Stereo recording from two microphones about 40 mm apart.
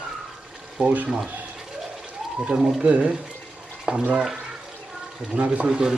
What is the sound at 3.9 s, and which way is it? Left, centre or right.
Speech, centre.